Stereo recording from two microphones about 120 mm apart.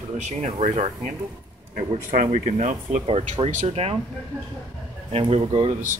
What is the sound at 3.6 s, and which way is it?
Speech, 55° right (ahead or behind).